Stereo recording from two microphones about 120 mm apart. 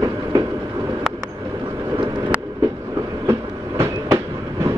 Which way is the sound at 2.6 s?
25° right (ahead or behind).